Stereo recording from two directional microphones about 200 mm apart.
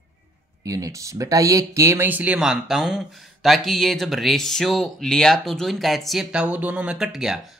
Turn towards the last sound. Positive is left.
turn(degrees=0)  # may be behind; listen again after turning